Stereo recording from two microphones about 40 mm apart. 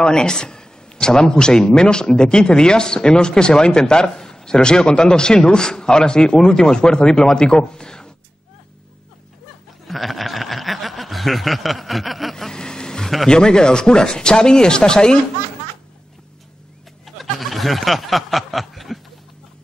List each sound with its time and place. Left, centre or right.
0.0 s a man's voice: left
9.8 s snicker: centre
12.4 s vehicle: centre
13.3 s a man's voice: centre
17.0 s snicker: centre